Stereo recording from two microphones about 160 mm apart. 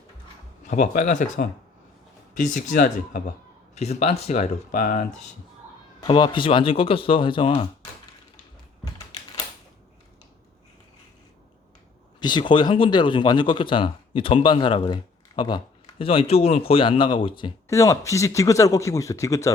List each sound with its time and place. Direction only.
0.6 s speech: 45° left (ahead or behind)
3.8 s speech: 40° left (ahead or behind)
6.1 s speech: 30° left (ahead or behind)
12.2 s speech: 30° left (ahead or behind)
17.7 s speech: 20° left (ahead or behind)